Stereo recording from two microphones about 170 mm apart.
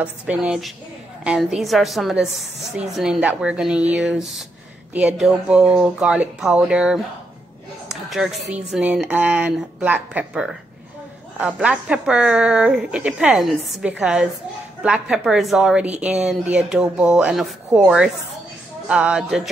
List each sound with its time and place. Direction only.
0.0 s a woman's voice: 5° right (ahead or behind)
7.9 s a sound: centre (ahead or behind)
8.5 s speech: 40° right (ahead or behind)
8.7 s a woman's voice: 5° right (ahead or behind)